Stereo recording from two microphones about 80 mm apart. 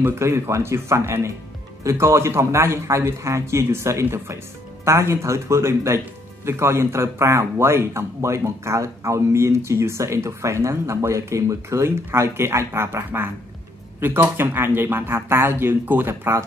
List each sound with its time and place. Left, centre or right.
0.0 s speech: right